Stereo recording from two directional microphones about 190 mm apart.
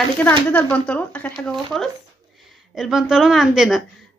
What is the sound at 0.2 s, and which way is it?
A woman's voice, 10° left (ahead or behind).